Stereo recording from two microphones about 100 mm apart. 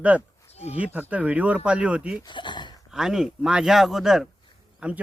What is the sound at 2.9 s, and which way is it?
A man's voice, 5° right (ahead or behind).